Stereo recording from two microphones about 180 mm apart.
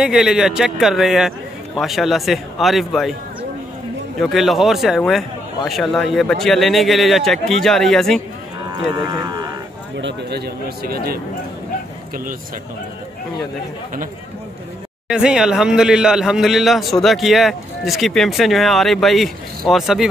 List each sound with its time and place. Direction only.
0.0 s a man's voice: 5° right (ahead or behind)
4.2 s a man's voice: centre (ahead or behind)
8.7 s speech: 20° right (ahead or behind)
9.9 s speech: 70° right (ahead or behind)
15.0 s a man's voice: 5° right (ahead or behind)